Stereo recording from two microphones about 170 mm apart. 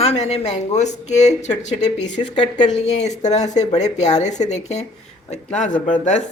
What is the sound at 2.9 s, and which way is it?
Speech, 45° left (ahead or behind).